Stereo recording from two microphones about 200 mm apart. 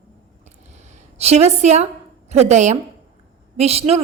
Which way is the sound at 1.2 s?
30° right (ahead or behind).